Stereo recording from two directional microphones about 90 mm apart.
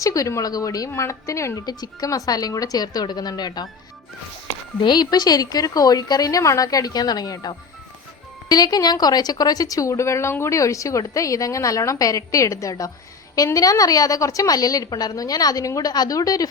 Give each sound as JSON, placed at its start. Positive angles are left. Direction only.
{"t": 0.0, "sound": "a woman's voice", "side_deg": 40}
{"t": 1.6, "sound": "a woman's voice", "side_deg": 45}
{"t": 4.8, "sound": "a woman's voice", "side_deg": 55}